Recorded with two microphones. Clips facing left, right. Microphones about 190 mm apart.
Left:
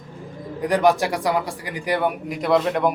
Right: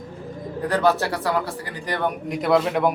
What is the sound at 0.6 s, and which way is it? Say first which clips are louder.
Speech: left 2 dB; 15° left (ahead or behind).